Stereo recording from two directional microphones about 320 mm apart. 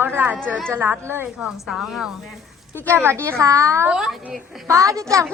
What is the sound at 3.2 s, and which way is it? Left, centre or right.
A woman's voice, centre.